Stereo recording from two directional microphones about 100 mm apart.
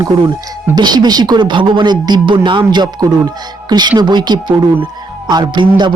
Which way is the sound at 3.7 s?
45° right (ahead or behind).